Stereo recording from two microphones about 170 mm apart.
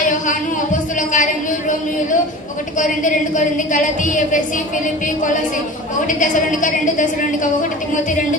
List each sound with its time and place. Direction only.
1.1 s a sound: 50° left (ahead or behind)
3.0 s a woman's voice: 50° left (ahead or behind)
6.0 s a woman's voice: 50° left (ahead or behind)